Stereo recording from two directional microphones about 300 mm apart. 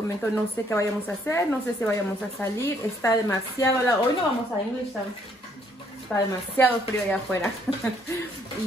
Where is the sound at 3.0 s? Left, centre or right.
Centre.